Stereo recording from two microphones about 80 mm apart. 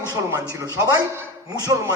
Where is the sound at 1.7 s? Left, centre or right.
Right.